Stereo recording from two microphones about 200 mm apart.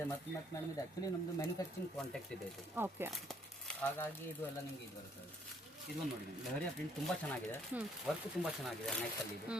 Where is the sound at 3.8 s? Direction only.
10° left (ahead or behind).